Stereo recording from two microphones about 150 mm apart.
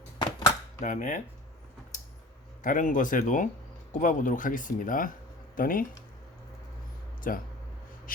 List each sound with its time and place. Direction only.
0.2 s dishes: 30° left (ahead or behind)
0.8 s speech: 55° left (ahead or behind)
2.6 s speech: 60° left (ahead or behind)
7.3 s speech: 70° left (ahead or behind)